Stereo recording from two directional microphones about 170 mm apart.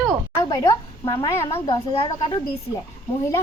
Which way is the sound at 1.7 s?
25° left (ahead or behind).